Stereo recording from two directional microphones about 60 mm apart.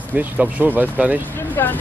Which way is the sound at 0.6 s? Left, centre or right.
Right.